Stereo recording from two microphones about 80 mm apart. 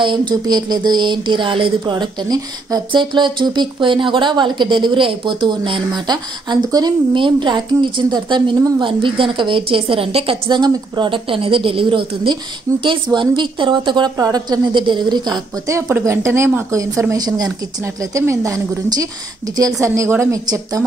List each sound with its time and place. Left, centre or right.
0.0 s speech: right
2.9 s speech: right
8.8 s a woman's voice: right
14.2 s a woman's voice: right
15.9 s a woman's voice: right
16.7 s a woman's voice: right
18.1 s a woman's voice: right
19.8 s a woman's voice: right